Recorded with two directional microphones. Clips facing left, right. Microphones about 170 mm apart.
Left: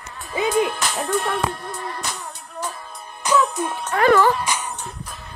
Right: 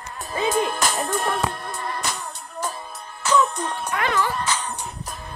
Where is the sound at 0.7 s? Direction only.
45° right (ahead or behind).